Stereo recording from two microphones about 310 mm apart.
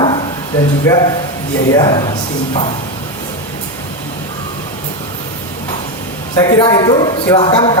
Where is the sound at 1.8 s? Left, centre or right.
Centre.